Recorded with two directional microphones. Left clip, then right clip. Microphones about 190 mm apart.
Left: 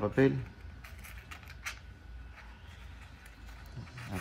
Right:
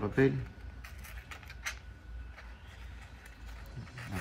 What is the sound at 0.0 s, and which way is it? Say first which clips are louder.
Speech: left 1 dB; 15° left (ahead or behind).